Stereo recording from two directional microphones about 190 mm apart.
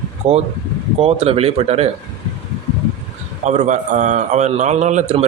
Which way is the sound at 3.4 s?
40° right (ahead or behind).